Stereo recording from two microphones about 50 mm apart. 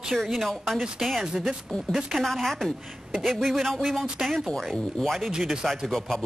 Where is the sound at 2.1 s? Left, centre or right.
Centre.